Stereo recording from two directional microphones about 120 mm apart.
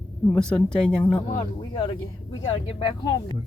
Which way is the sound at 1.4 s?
30° left (ahead or behind).